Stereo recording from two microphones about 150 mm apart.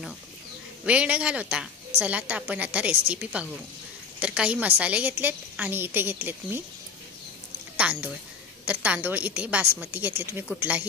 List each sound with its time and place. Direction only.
0.8 s a woman's voice: 10° right (ahead or behind)
7.7 s a woman's voice: 10° right (ahead or behind)